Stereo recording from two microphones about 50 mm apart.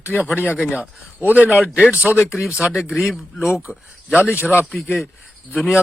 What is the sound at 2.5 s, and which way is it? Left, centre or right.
Speech, centre.